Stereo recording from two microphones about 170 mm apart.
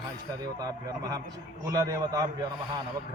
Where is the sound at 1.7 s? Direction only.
20° right (ahead or behind).